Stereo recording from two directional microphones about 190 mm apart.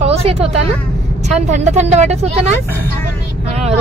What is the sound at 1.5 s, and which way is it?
Speech, 35° right (ahead or behind).